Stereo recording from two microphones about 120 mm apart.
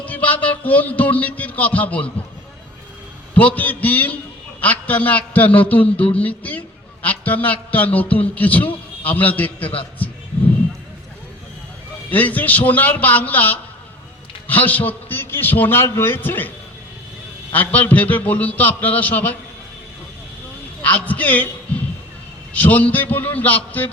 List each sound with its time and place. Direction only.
0.0 s a man's voice: 15° left (ahead or behind)
3.3 s a man's voice: 15° left (ahead or behind)
12.1 s a man's voice: 15° left (ahead or behind)
17.5 s a man's voice: 15° left (ahead or behind)
20.8 s a man's voice: 15° left (ahead or behind)
22.5 s a man's voice: 15° left (ahead or behind)